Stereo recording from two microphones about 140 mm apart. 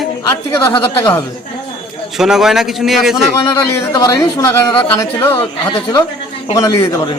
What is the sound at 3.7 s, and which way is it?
A man's voice, 25° left (ahead or behind).